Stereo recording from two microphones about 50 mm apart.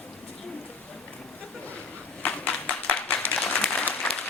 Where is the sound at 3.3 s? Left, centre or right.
Left.